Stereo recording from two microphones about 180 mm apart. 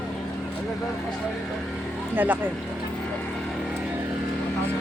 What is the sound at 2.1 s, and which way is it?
Speech, 10° right (ahead or behind).